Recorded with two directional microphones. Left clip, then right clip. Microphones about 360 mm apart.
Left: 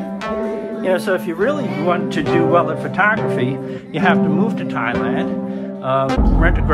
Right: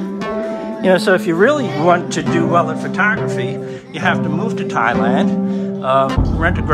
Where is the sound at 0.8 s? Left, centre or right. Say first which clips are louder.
Right 5 dB; right.